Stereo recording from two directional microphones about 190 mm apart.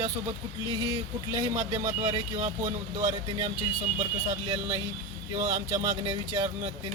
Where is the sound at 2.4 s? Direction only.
40° right (ahead or behind).